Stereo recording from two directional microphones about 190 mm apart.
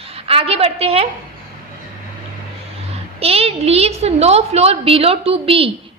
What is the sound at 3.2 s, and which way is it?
A woman's voice, 30° right (ahead or behind).